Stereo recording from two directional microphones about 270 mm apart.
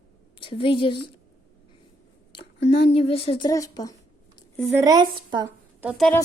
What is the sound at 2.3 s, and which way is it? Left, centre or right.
Speech, centre.